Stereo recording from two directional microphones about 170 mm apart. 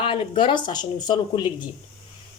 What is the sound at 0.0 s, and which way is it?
Speech, 30° left (ahead or behind).